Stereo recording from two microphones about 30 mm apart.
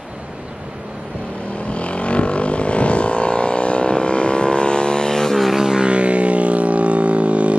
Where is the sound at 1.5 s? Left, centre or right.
Left; by 5.4 s centre.